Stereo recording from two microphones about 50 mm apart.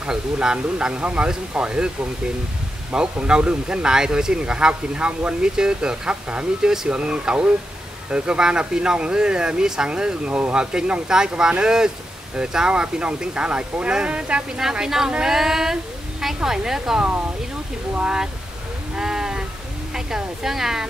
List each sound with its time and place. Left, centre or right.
0.0 s speech: centre
2.9 s speech: centre
14.6 s speech: centre
18.0 s speech: centre
18.9 s sheep: centre
19.9 s speech: centre